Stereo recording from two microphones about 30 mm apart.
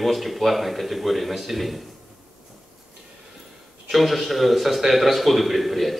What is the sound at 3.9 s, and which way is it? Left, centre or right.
A man's voice, centre.